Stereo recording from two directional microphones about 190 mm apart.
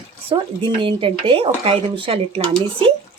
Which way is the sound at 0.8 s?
25° right (ahead or behind).